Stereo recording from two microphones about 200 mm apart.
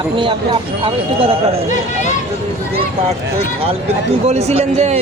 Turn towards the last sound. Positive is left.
turn(degrees=-30)  # may be behind; listen again after turning